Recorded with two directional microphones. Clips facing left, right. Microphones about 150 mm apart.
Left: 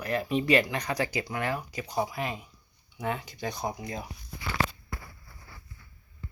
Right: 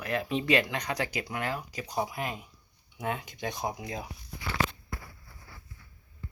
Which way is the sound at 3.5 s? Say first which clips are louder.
Left 1 dB; 20° right (ahead or behind).